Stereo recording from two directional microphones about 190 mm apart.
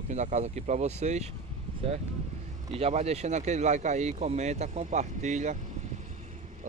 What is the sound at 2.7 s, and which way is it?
Speech, 35° right (ahead or behind).